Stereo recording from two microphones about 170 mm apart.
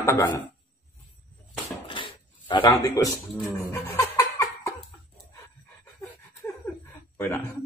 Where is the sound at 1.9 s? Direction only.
30° left (ahead or behind).